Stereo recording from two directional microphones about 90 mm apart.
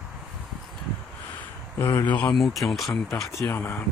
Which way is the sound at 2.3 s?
Centre (ahead or behind).